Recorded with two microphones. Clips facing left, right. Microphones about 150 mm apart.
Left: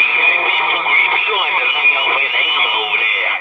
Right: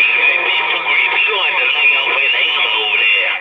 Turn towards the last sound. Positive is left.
turn(degrees=40)  # may be behind; listen again after turning